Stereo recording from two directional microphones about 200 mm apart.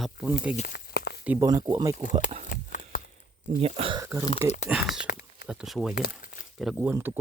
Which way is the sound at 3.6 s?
30° right (ahead or behind).